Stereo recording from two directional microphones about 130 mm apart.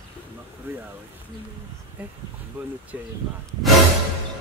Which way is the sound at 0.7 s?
15° right (ahead or behind).